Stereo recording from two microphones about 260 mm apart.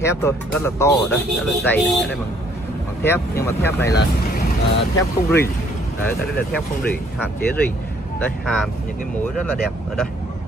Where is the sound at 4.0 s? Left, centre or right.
Left.